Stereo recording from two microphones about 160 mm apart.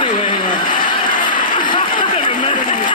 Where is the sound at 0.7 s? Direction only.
55° left (ahead or behind).